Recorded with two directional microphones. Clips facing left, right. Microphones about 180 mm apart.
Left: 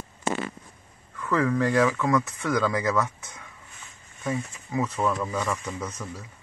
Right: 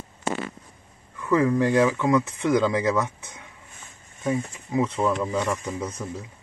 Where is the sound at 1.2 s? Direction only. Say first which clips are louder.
Right 3 dB; 15° right (ahead or behind).